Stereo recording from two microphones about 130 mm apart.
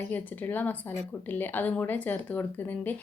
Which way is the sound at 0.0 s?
15° left (ahead or behind).